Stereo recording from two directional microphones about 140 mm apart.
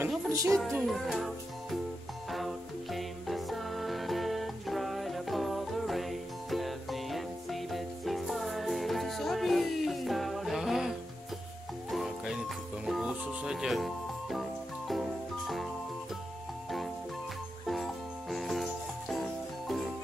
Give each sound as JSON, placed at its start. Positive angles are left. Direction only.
{"t": 0.3, "sound": "speech", "side_deg": -20}
{"t": 0.6, "sound": "music", "side_deg": 0}
{"t": 17.6, "sound": "music", "side_deg": 0}